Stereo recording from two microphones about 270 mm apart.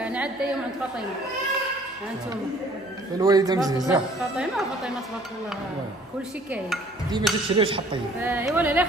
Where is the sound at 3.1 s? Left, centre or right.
Centre.